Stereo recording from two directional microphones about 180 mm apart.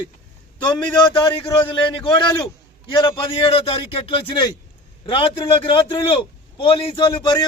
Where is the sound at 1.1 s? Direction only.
25° left (ahead or behind).